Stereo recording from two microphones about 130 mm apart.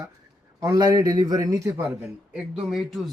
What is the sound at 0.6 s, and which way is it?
A man's voice, 30° right (ahead or behind).